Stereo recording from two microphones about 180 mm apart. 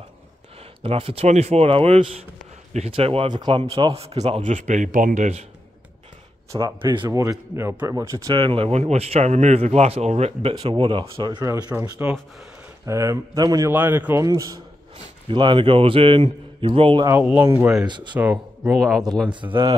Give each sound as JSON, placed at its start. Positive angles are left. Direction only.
{"t": 0.8, "sound": "speech", "side_deg": -30}
{"t": 6.5, "sound": "speech", "side_deg": -20}
{"t": 11.7, "sound": "a man's voice", "side_deg": -10}
{"t": 17.0, "sound": "a man's voice", "side_deg": -10}
{"t": 17.8, "sound": "speech", "side_deg": -25}
{"t": 18.1, "sound": "speech", "side_deg": -10}
{"t": 18.8, "sound": "speech", "side_deg": 0}
{"t": 19.2, "sound": "speech", "side_deg": -25}